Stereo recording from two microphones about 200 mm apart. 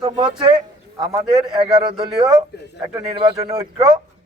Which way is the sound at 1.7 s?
25° right (ahead or behind).